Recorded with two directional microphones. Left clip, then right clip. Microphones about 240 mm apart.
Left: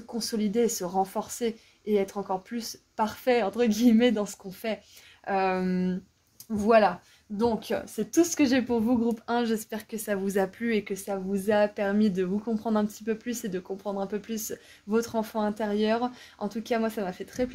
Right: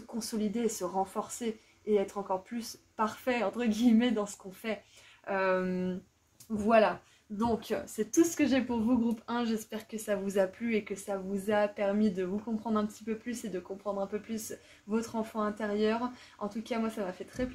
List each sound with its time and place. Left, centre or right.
0.2 s speech: left